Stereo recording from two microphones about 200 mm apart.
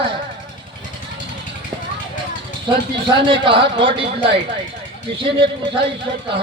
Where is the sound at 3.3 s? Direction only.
25° right (ahead or behind).